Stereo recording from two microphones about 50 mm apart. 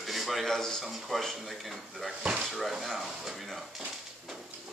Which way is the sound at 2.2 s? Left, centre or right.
Right.